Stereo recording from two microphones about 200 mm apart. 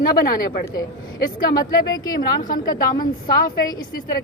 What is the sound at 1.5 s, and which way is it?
A woman's voice, 20° left (ahead or behind).